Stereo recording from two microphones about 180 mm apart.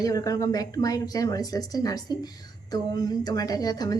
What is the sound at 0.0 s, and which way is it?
Speech, 20° left (ahead or behind).